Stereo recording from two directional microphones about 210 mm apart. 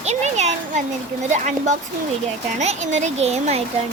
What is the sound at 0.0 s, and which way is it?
Speech, 30° right (ahead or behind).